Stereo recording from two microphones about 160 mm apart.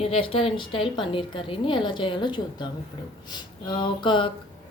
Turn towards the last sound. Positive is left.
turn(degrees=30)  # may be behind; listen again after turning